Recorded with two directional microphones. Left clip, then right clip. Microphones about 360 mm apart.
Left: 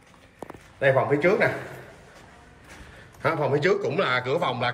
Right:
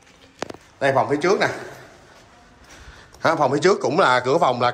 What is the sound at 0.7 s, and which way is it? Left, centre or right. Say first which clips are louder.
Speech: right 2 dB; centre.